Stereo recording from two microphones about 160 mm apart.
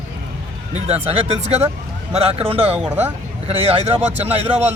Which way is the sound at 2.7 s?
10° right (ahead or behind).